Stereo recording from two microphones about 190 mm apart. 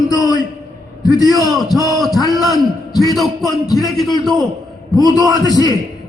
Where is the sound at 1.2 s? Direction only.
20° right (ahead or behind).